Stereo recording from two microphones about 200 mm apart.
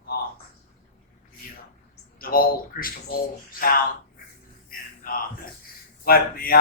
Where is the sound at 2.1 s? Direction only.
45° left (ahead or behind).